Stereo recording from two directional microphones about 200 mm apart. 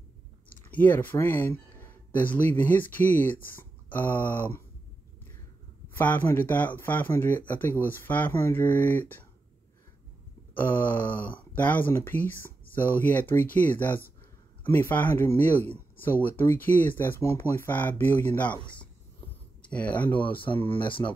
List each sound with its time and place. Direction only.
0.5 s speech: 10° left (ahead or behind)
5.9 s speech: 10° left (ahead or behind)
10.5 s speech: 10° left (ahead or behind)
20.3 s speech: 25° left (ahead or behind)